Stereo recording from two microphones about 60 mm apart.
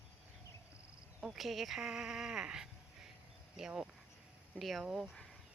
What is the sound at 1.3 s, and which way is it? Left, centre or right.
Speech, centre.